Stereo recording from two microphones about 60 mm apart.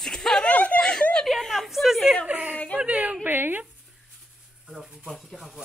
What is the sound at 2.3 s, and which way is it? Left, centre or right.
A woman's voice, right.